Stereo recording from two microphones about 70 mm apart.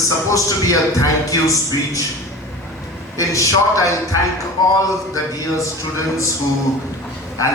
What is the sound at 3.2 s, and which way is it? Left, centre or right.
A man's voice, left.